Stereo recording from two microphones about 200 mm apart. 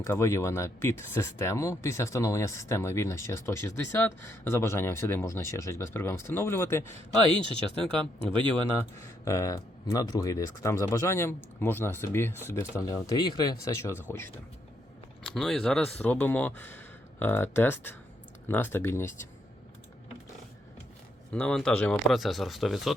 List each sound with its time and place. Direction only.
0.0 s speech: 15° left (ahead or behind)
7.4 s speech: 25° right (ahead or behind)
9.0 s speech: 15° left (ahead or behind)
15.2 s speech: centre (ahead or behind)
21.3 s speech: 5° left (ahead or behind)